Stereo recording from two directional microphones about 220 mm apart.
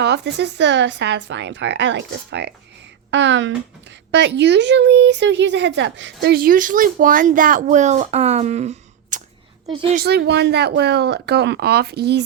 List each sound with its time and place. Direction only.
0.0 s speech: 50° right (ahead or behind)
6.2 s a woman's voice: 40° right (ahead or behind)
10.0 s speech: 50° right (ahead or behind)